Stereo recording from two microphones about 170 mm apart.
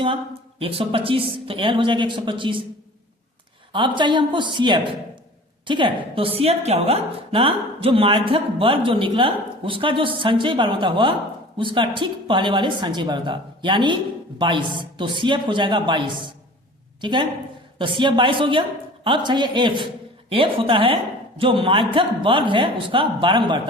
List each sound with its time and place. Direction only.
0.6 s a woman's voice: 35° right (ahead or behind)
3.7 s a woman's voice: 30° right (ahead or behind)